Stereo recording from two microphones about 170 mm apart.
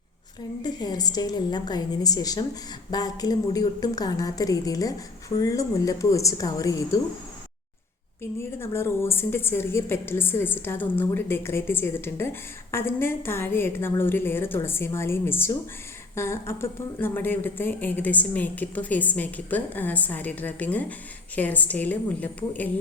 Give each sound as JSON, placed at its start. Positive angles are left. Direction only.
{"t": 0.6, "sound": "a woman's voice", "side_deg": 25}
{"t": 8.2, "sound": "a woman's voice", "side_deg": 15}